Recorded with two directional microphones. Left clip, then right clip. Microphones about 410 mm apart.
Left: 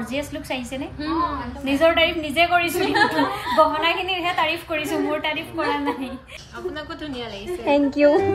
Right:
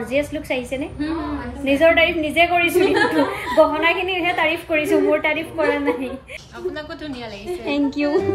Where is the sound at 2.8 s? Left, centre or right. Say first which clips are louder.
Right 3 dB; left.